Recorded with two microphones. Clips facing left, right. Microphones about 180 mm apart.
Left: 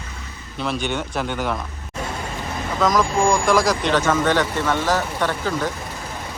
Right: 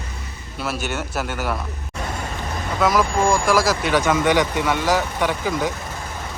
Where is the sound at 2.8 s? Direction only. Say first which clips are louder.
Even; 5° right (ahead or behind).